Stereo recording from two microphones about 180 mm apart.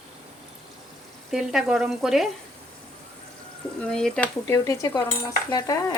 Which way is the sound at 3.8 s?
5° left (ahead or behind).